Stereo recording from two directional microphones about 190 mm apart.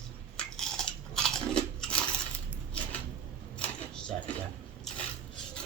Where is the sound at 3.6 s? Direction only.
5° left (ahead or behind).